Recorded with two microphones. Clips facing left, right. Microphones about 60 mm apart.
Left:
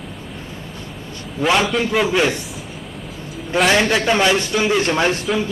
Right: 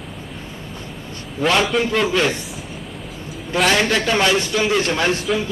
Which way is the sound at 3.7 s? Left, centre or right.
Centre.